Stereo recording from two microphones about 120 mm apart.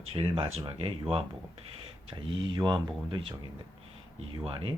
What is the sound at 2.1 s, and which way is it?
Speech, 40° right (ahead or behind).